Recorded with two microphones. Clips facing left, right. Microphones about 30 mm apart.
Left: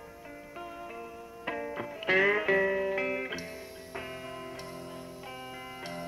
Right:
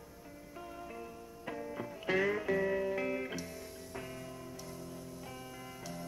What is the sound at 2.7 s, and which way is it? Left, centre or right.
Music, left.